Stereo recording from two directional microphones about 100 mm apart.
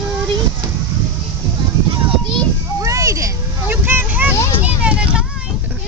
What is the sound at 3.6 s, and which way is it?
Vehicle, 20° right (ahead or behind).